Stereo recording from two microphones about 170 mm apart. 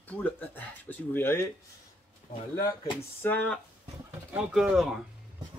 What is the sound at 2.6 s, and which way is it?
Speech, 25° left (ahead or behind).